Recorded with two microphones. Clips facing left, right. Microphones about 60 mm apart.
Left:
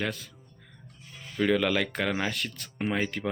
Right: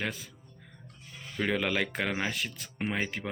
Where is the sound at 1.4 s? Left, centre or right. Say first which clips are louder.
Left 4 dB; centre.